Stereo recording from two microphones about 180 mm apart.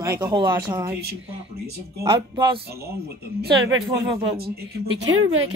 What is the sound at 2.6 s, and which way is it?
Speech, 60° right (ahead or behind).